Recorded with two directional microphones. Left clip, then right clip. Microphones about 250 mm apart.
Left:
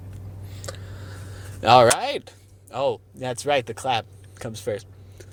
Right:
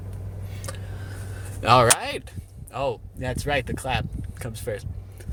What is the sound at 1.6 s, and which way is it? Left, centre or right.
Speech, centre.